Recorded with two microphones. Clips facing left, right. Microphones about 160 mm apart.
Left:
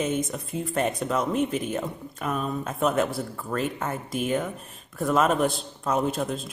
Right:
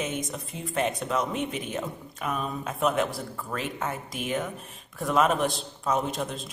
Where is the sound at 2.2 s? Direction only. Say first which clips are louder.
Left 2 dB; centre (ahead or behind).